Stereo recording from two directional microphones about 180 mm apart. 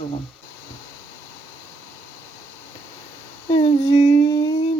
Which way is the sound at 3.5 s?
35° left (ahead or behind).